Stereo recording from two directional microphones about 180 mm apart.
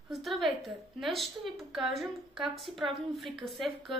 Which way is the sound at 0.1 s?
Centre (ahead or behind).